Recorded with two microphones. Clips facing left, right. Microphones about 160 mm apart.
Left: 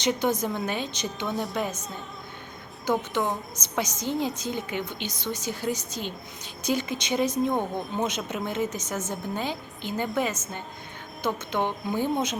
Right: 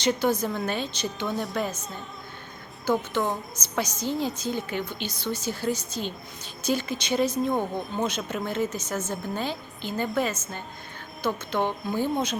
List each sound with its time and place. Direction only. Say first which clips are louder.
0.0 s a woman's voice: right 1 dB; 20° left (ahead or behind)
1.3 s a woman's voice: left 2 dB; centre (ahead or behind)
3.5 s a woman's voice: even; 20° left (ahead or behind)